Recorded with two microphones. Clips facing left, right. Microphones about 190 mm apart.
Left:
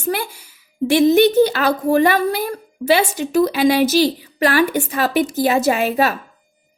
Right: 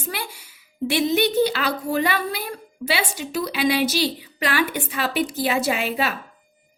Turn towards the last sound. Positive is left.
turn(degrees=45)  # may be behind; listen again after turning